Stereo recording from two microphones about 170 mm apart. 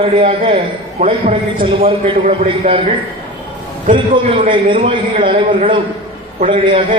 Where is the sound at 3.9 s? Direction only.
50° right (ahead or behind).